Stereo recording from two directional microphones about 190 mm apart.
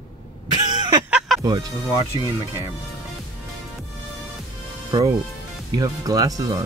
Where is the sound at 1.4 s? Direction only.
20° right (ahead or behind).